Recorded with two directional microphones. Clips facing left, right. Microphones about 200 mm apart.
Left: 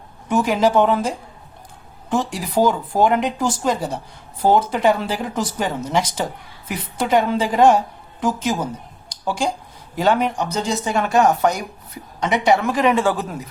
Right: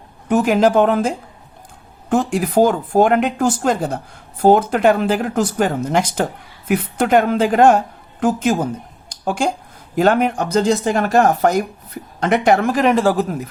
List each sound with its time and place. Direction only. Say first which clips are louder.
0.3 s speech: right 3 dB; 50° right (ahead or behind)
2.0 s a woman's voice: right 5 dB; 50° right (ahead or behind)
10.0 s speech: right 3 dB; 50° right (ahead or behind)